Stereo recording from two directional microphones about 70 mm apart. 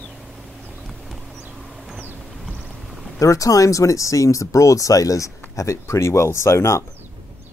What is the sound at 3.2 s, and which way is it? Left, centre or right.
Speech, left.